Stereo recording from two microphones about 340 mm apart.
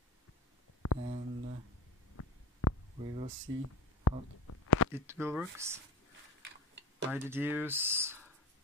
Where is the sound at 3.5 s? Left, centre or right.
Right.